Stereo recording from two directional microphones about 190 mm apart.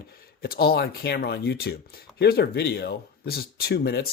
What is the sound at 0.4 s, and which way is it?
Speech, 55° left (ahead or behind).